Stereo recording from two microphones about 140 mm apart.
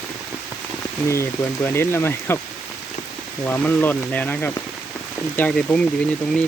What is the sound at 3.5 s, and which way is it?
Speech, 15° left (ahead or behind).